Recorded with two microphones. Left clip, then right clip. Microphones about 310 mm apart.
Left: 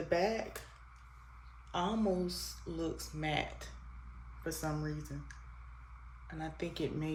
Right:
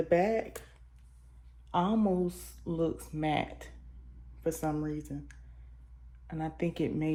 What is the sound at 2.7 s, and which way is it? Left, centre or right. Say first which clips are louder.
Speech: right 8 dB; centre.